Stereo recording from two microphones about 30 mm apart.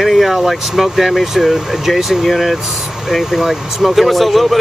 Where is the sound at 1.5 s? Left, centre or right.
Centre.